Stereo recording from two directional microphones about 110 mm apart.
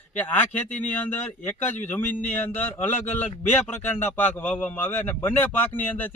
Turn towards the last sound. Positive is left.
turn(degrees=15)  # may be behind; listen again after turning